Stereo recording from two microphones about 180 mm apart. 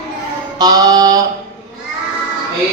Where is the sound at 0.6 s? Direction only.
20° right (ahead or behind).